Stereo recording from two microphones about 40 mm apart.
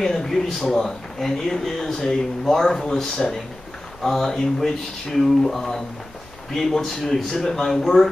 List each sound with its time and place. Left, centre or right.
0.0 s speech: centre